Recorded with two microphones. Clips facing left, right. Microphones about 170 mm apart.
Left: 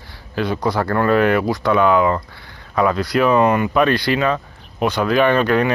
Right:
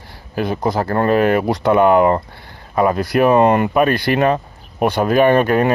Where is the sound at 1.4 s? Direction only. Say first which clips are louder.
Right 3 dB; 55° right (ahead or behind).